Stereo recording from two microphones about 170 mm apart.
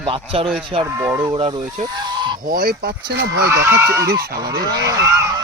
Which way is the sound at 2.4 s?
60° right (ahead or behind).